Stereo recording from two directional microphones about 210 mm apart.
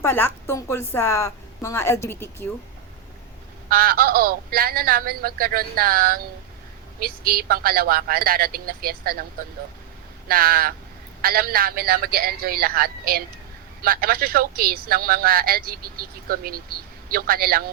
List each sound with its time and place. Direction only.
0.0 s a woman's voice: 10° left (ahead or behind)
3.7 s speech: 45° right (ahead or behind)
10.2 s speech: 45° right (ahead or behind)